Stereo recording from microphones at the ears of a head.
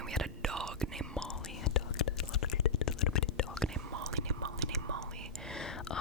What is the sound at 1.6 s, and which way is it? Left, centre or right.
Whispering, left.